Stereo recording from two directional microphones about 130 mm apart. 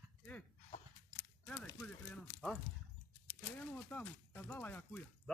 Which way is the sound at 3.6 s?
10° left (ahead or behind).